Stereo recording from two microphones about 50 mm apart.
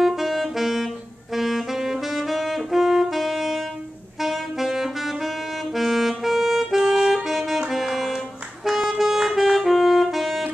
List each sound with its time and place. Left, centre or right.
0.0 s saxophone: centre
7.2 s saxophone: centre
8.6 s music: centre
10.0 s saxophone: centre